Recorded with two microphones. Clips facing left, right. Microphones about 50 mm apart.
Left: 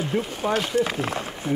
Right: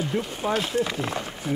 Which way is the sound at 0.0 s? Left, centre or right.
Centre.